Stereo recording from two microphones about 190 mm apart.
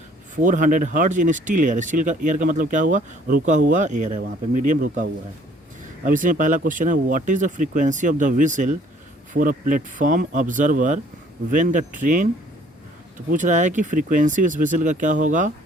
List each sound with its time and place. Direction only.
0.3 s speech: 40° right (ahead or behind)
6.1 s speech: 45° right (ahead or behind)
13.3 s speech: 40° right (ahead or behind)